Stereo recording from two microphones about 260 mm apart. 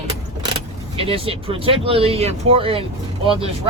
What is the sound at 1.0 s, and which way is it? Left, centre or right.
Speech, right.